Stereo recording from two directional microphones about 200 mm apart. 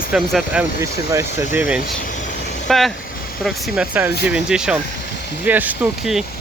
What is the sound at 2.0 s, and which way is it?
Vehicle, 40° left (ahead or behind).